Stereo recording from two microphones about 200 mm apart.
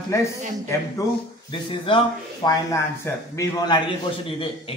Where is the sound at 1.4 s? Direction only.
25° left (ahead or behind).